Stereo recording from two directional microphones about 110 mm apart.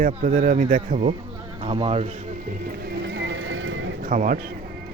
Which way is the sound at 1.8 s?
65° right (ahead or behind).